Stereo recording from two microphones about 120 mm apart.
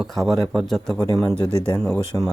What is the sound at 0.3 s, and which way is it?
Speech, centre (ahead or behind).